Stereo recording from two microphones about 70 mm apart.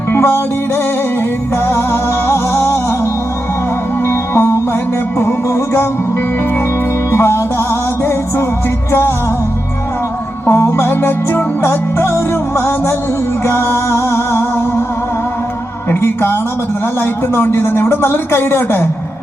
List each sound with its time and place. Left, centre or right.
0.1 s music: left
1.6 s music: left
7.1 s music: left
10.5 s music: left
15.9 s a sound: left
17.0 s music: left